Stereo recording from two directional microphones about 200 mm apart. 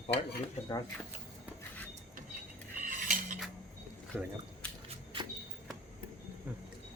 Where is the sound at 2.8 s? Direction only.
40° right (ahead or behind).